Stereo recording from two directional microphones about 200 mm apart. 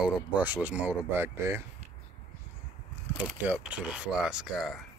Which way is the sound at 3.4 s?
5° right (ahead or behind).